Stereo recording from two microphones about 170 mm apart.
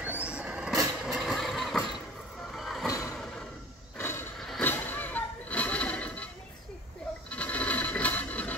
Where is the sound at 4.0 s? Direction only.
15° left (ahead or behind).